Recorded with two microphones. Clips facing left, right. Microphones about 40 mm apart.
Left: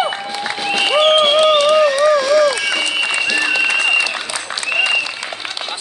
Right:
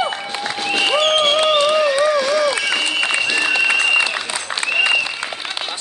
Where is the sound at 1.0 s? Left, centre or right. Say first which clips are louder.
Left 7 dB; centre.